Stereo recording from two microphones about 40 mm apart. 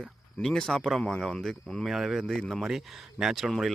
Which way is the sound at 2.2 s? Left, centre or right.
Centre.